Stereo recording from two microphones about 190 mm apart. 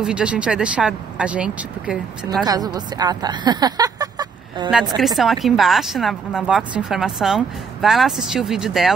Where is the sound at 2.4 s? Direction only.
20° right (ahead or behind).